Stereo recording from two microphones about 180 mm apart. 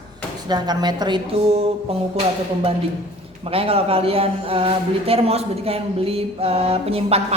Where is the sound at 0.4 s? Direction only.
25° right (ahead or behind).